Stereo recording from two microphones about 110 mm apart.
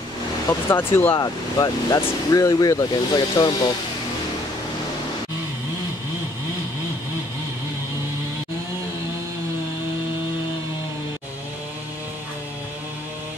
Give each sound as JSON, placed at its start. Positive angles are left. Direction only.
{"t": 0.7, "sound": "speech", "side_deg": 20}
{"t": 1.2, "sound": "speech", "side_deg": 35}